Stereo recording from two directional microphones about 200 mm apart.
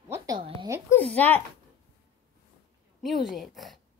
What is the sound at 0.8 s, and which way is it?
Speech, 10° left (ahead or behind).